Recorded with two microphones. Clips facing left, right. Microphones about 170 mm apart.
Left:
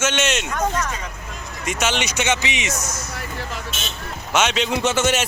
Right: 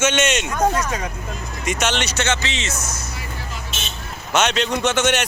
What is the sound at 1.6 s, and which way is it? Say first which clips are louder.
Speech: right 1 dB; 5° left (ahead or behind).